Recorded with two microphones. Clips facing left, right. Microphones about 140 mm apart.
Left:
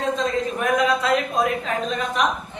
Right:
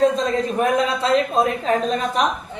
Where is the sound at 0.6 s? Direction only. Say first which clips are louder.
Even; 30° right (ahead or behind).